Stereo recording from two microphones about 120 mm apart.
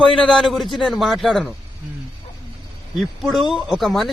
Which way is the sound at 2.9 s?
Centre (ahead or behind).